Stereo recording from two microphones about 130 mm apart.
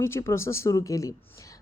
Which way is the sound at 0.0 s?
20° left (ahead or behind).